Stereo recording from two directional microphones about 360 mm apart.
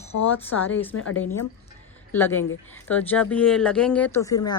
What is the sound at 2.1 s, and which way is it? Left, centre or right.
Speech, centre.